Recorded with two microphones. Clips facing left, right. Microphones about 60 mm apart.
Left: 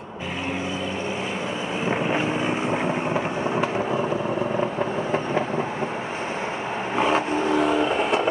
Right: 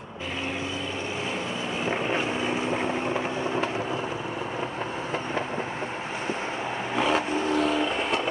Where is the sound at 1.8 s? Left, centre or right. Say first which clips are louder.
Left 4 dB; centre.